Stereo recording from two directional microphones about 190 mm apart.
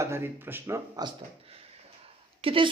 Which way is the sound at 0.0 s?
15° right (ahead or behind).